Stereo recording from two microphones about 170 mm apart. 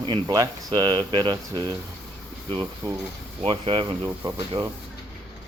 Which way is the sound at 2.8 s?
20° right (ahead or behind).